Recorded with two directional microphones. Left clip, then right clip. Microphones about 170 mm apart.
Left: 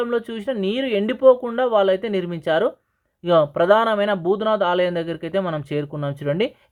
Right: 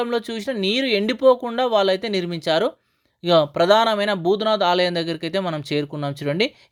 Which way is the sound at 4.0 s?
20° right (ahead or behind).